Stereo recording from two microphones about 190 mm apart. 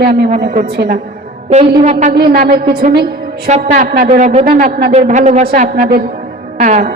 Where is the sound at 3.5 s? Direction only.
40° right (ahead or behind).